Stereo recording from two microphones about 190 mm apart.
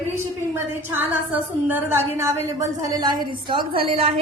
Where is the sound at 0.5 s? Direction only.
10° right (ahead or behind).